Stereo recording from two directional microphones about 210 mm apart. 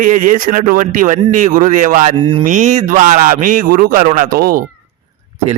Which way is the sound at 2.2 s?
25° right (ahead or behind).